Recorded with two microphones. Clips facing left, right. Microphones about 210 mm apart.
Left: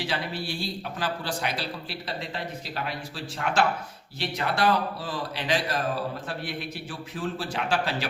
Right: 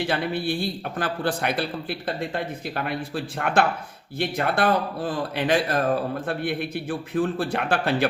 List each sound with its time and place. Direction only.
0.0 s a man's voice: 55° right (ahead or behind)